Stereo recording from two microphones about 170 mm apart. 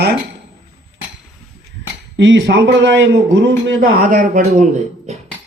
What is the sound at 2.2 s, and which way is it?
A man's voice, 90° right.